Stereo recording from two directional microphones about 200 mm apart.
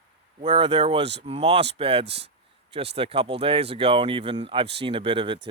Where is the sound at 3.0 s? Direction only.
30° right (ahead or behind).